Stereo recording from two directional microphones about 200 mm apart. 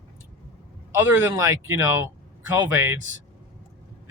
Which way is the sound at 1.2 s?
15° right (ahead or behind).